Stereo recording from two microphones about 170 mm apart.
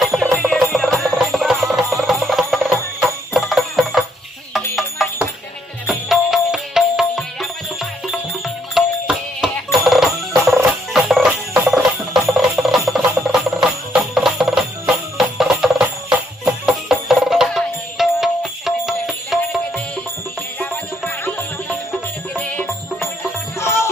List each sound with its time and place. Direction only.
0.0 s music: centre (ahead or behind)
10.9 s jingle bell: centre (ahead or behind)
20.6 s music: 15° left (ahead or behind)